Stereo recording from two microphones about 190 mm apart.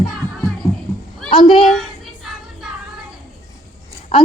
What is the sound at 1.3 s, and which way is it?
Speech, 30° left (ahead or behind).